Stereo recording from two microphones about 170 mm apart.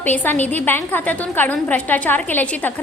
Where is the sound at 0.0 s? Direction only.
10° left (ahead or behind).